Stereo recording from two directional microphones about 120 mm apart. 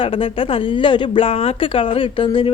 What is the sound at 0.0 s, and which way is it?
Speech, 50° left (ahead or behind).